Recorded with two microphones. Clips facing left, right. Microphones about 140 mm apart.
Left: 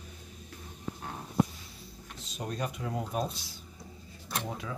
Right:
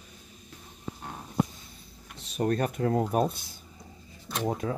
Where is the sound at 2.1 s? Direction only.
60° right (ahead or behind).